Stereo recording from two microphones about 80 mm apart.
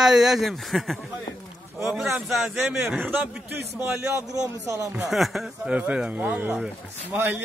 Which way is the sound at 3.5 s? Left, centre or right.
Right.